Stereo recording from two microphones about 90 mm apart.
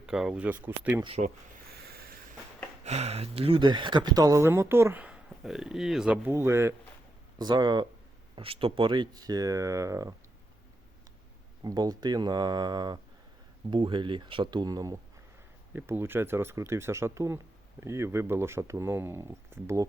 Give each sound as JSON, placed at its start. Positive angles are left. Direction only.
{"t": 0.0, "sound": "speech", "side_deg": -5}
{"t": 0.4, "sound": "speech", "side_deg": -20}
{"t": 3.2, "sound": "speech", "side_deg": -90}
{"t": 4.4, "sound": "speech", "side_deg": -25}
{"t": 5.0, "sound": "speech", "side_deg": -10}
{"t": 6.1, "sound": "speech", "side_deg": -25}
{"t": 7.3, "sound": "speech", "side_deg": -50}
{"t": 8.4, "sound": "speech", "side_deg": -85}
{"t": 11.6, "sound": "speech", "side_deg": -45}
{"t": 13.7, "sound": "speech", "side_deg": -65}
{"t": 15.7, "sound": "speech", "side_deg": -25}